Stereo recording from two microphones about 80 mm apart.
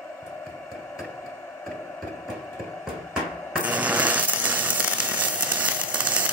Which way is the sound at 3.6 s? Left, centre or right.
Centre.